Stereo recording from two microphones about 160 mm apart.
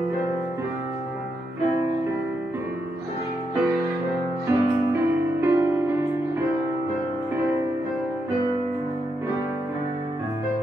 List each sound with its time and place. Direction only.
4.5 s music: 15° right (ahead or behind)